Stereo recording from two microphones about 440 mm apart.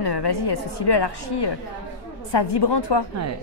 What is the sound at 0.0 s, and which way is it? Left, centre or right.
A woman's voice, left.